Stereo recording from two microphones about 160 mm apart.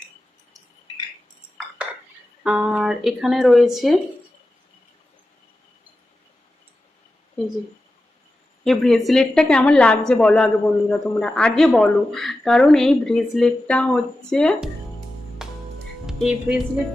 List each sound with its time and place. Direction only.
2.4 s a man's voice: 5° right (ahead or behind)
8.6 s a man's voice: centre (ahead or behind)
15.4 s music: 5° right (ahead or behind)
16.0 s speech: 5° right (ahead or behind)